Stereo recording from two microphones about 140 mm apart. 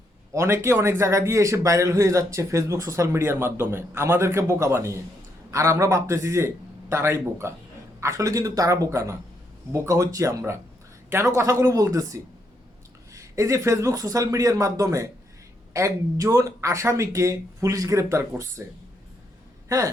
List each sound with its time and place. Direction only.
0.3 s a man's voice: 20° right (ahead or behind)
19.6 s speech: 20° right (ahead or behind)